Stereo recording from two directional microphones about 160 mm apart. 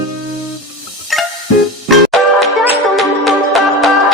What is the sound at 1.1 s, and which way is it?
Music, centre (ahead or behind).